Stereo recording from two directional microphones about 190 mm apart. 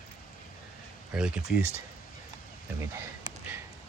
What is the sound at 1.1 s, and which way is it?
Speech, 5° right (ahead or behind).